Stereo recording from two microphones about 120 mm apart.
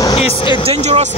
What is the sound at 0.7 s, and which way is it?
Speech, 65° right (ahead or behind).